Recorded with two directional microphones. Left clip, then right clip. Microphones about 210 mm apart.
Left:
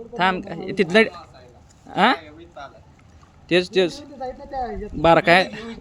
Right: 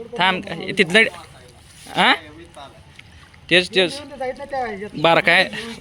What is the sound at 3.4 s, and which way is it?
Speech, 20° left (ahead or behind).